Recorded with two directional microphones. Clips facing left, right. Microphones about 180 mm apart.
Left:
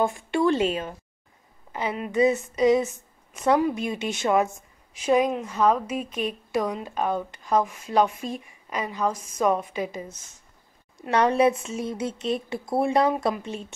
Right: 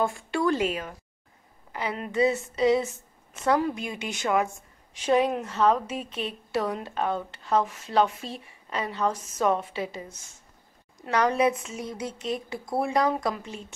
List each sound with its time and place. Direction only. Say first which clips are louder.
0.0 s a woman's voice: left 3 dB; 20° left (ahead or behind)
4.9 s a woman's voice: left 1 dB; 10° left (ahead or behind)